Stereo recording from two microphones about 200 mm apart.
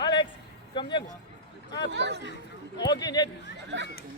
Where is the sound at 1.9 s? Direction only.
60° right (ahead or behind).